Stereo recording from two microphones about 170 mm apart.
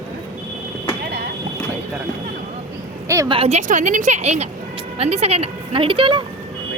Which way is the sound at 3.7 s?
50° right (ahead or behind).